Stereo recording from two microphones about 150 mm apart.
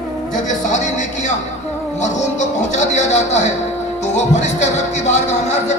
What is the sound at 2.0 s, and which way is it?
Speech, 50° left (ahead or behind).